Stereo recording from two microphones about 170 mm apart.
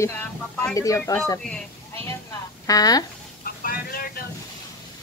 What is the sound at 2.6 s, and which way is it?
Speech, 20° left (ahead or behind).